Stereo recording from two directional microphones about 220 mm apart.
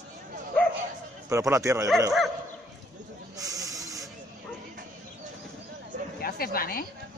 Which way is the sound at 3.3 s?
15° right (ahead or behind).